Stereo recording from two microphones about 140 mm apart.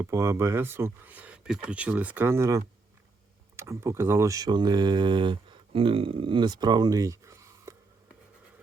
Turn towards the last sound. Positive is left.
turn(degrees=-20)  # may be behind; listen again after turning